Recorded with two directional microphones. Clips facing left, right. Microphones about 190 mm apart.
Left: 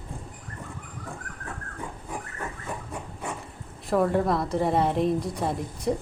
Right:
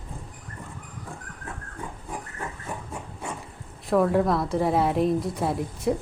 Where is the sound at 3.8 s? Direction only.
Centre (ahead or behind).